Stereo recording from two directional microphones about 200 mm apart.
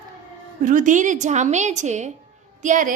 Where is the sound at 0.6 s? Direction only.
40° right (ahead or behind).